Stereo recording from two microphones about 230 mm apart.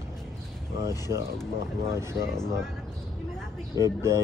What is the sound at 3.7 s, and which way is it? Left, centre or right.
Speech, centre.